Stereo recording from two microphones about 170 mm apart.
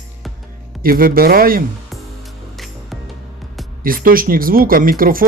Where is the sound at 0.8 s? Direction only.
60° right (ahead or behind).